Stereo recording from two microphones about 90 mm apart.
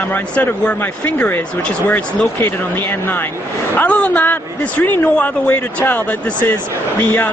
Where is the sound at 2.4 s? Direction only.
20° left (ahead or behind).